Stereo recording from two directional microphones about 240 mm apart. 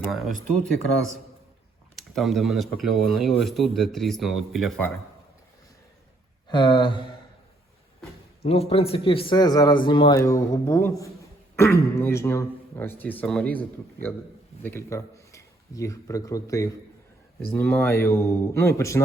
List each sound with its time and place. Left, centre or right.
0.1 s speech: centre
2.0 s speech: centre
6.5 s a man's voice: centre
8.4 s a man's voice: left; by 13.6 s centre
14.6 s speech: centre